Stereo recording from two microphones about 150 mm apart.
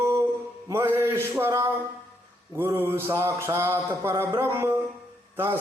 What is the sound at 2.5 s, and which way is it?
Mantra, 15° right (ahead or behind).